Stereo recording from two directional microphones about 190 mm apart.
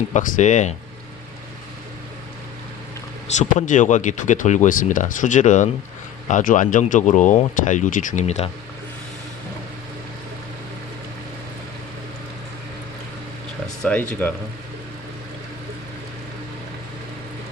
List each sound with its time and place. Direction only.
0.1 s speech: 40° left (ahead or behind)
3.3 s speech: 40° left (ahead or behind)
13.8 s speech: 5° left (ahead or behind)